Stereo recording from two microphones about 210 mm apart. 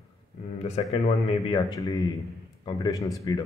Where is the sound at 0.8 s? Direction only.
25° left (ahead or behind).